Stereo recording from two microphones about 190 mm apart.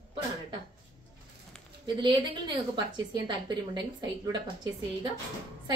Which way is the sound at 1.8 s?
25° right (ahead or behind).